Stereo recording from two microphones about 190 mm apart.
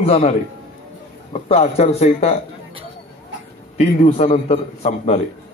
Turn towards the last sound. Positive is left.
turn(degrees=35)  # may be behind; listen again after turning